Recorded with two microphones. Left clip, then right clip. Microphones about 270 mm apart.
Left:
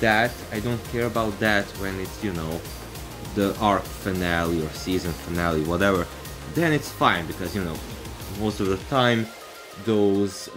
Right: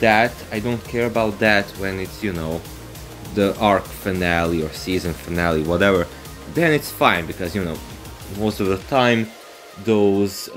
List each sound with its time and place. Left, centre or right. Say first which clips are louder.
0.0 s speech: right 5 dB; centre
3.3 s speech: right 5 dB; centre